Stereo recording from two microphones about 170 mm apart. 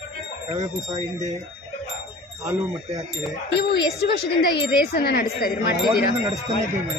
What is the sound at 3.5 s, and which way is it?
Speech, 70° left (ahead or behind).